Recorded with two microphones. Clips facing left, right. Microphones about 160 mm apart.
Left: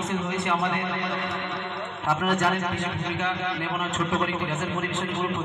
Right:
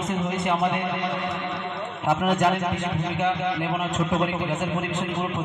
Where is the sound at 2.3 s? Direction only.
15° right (ahead or behind).